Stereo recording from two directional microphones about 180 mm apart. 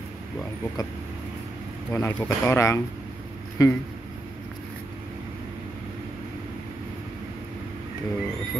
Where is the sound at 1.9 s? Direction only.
15° left (ahead or behind).